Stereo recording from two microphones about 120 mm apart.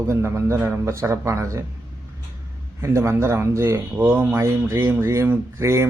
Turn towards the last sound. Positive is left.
turn(degrees=-25)  # may be behind; listen again after turning